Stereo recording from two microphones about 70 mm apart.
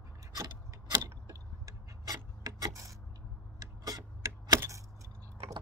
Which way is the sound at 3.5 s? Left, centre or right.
Right.